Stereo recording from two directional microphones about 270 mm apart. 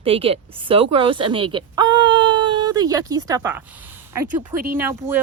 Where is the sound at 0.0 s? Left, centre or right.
Right.